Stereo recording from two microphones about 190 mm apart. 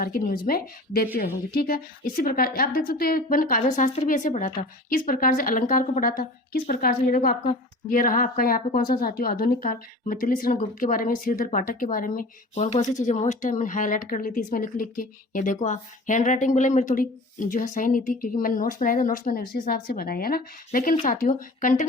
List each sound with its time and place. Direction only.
0.0 s speech: 50° left (ahead or behind)
12.5 s speech: 35° left (ahead or behind)